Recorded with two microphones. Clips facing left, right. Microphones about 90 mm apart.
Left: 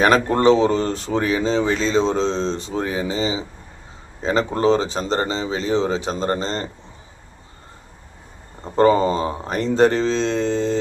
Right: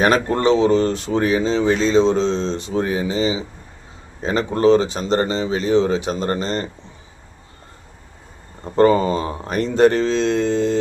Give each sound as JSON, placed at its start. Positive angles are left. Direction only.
{"t": 0.0, "sound": "speech", "side_deg": 35}
{"t": 1.6, "sound": "speech", "side_deg": -40}
{"t": 1.9, "sound": "speech", "side_deg": 35}
{"t": 8.7, "sound": "speech", "side_deg": 30}